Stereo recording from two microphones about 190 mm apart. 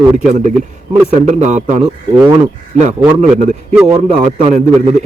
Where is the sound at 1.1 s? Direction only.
40° right (ahead or behind).